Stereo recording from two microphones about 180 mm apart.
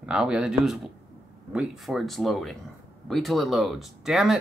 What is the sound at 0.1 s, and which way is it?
Speech, 5° right (ahead or behind).